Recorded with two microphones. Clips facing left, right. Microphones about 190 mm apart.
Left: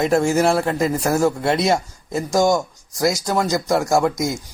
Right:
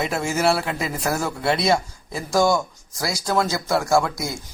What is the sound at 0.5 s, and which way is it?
Speech, 40° left (ahead or behind).